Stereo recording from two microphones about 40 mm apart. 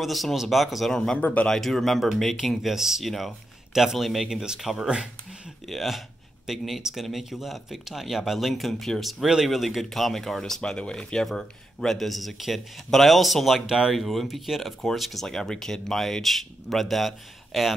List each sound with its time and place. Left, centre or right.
0.0 s speech: centre
0.9 s speech: centre
1.2 s speech: left
1.5 s speech: centre
2.7 s speech: centre
3.0 s speech: centre
4.3 s speech: centre
4.6 s speech: centre
10.6 s speech: left; by 13.6 s centre
13.6 s speech: centre
13.9 s speech: centre